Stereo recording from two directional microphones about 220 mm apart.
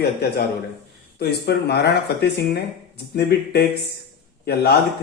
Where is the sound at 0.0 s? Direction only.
45° left (ahead or behind).